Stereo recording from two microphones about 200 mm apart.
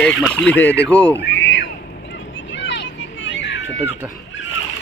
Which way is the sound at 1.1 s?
65° left (ahead or behind).